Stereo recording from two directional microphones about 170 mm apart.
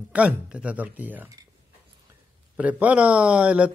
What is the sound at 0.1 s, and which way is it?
A man's voice, 5° right (ahead or behind).